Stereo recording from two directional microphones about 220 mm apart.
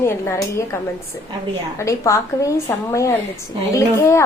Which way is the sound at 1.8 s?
15° left (ahead or behind).